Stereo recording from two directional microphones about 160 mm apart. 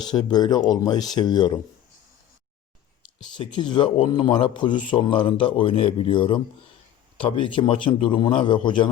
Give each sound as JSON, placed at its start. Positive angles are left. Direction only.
{"t": 0.0, "sound": "speech", "side_deg": 25}
{"t": 3.2, "sound": "speech", "side_deg": 30}